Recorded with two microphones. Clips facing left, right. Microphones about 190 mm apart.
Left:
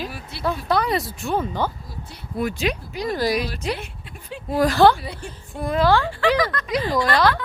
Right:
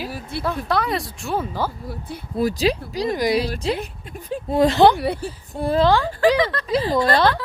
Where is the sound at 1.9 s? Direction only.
55° right (ahead or behind).